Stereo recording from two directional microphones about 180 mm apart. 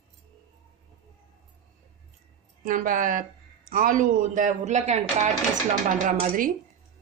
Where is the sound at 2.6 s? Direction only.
50° right (ahead or behind).